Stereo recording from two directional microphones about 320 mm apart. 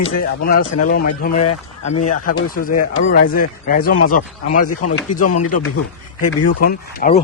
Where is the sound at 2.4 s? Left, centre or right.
Left.